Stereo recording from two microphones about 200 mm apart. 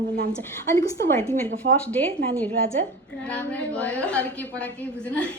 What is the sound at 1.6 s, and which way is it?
Speech, 55° right (ahead or behind).